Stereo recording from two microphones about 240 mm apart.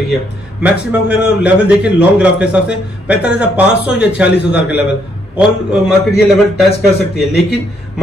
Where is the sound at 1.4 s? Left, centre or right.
Centre.